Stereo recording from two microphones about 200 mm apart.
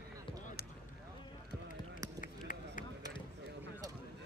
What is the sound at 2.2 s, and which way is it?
Run, 40° left (ahead or behind).